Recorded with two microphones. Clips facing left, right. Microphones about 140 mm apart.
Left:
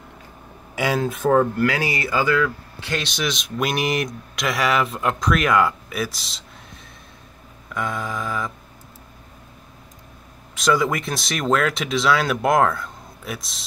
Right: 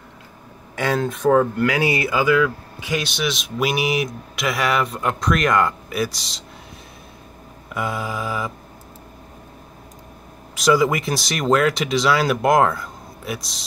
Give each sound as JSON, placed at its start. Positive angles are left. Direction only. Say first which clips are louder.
{"t": 0.7, "sound": "speech", "louder": "even", "side_deg": 10}
{"t": 1.6, "sound": "speech", "louder": "right 2 dB", "side_deg": -20}
{"t": 2.0, "sound": "speech", "louder": "even", "side_deg": -5}
{"t": 7.7, "sound": "a sound", "louder": "right 1 dB", "side_deg": -5}
{"t": 10.5, "sound": "speech", "louder": "right 3 dB", "side_deg": 0}